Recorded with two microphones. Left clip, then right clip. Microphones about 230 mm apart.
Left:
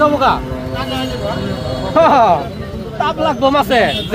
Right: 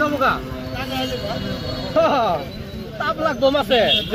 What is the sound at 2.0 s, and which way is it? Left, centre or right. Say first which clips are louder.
Speech: left 8 dB; left.